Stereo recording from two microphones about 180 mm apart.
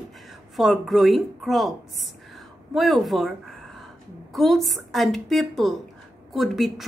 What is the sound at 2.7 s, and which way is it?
Speech, centre (ahead or behind).